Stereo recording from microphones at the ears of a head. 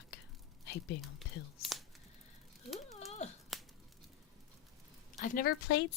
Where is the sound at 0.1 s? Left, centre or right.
Left.